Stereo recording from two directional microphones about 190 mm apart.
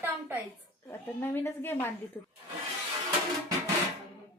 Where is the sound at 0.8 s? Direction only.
10° left (ahead or behind).